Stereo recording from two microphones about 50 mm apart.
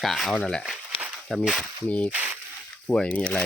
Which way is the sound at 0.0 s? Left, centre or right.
Centre.